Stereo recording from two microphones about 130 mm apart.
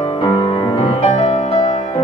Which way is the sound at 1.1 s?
55° left (ahead or behind).